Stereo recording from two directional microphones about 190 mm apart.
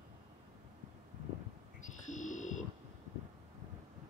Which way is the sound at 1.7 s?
40° left (ahead or behind).